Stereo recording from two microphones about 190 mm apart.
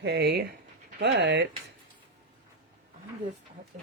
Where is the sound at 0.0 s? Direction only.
60° right (ahead or behind).